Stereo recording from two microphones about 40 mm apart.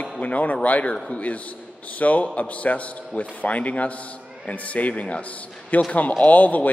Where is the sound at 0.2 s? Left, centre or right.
Left.